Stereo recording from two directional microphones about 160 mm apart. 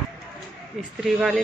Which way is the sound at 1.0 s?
Centre (ahead or behind).